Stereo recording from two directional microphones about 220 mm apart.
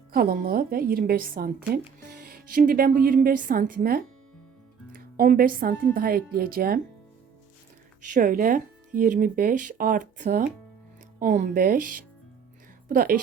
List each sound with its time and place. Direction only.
0.1 s speech: 40° right (ahead or behind)
8.1 s speech: 40° right (ahead or behind)